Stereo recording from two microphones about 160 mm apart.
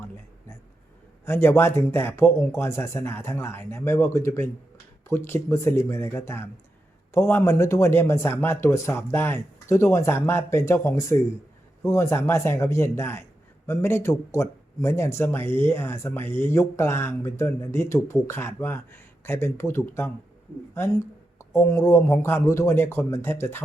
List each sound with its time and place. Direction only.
1.2 s speech: 15° left (ahead or behind)
20.7 s a sound: 15° left (ahead or behind)
21.6 s speech: 20° left (ahead or behind)